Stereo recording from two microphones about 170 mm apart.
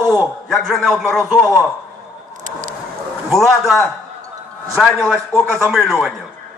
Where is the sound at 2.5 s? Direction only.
50° right (ahead or behind).